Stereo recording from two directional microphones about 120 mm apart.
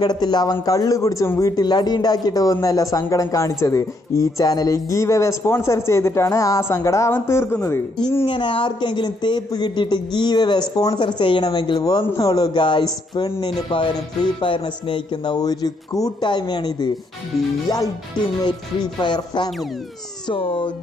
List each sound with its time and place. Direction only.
0.0 s speech: 35° left (ahead or behind)
1.6 s speech: 35° left (ahead or behind)
8.3 s speech: 45° left (ahead or behind)
14.4 s speech: 45° left (ahead or behind)
18.4 s speech: 35° left (ahead or behind)
20.2 s speech: 45° left (ahead or behind)